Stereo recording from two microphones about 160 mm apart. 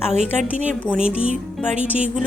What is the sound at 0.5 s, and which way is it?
A woman's voice, 50° right (ahead or behind).